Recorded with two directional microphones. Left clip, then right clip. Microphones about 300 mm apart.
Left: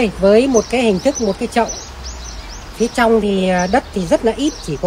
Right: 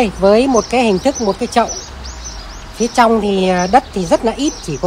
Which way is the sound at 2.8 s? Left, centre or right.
Centre.